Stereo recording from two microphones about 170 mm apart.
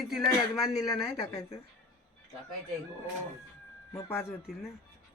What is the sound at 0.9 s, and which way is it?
Speech, 20° left (ahead or behind).